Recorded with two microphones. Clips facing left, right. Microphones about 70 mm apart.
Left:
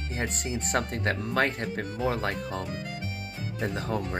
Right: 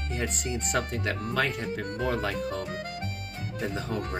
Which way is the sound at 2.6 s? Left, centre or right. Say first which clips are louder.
Right 1 dB; right.